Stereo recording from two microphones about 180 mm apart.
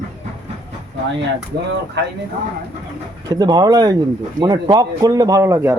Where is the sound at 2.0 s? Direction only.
75° right (ahead or behind).